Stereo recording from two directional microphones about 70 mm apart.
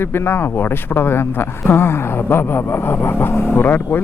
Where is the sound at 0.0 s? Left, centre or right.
Left.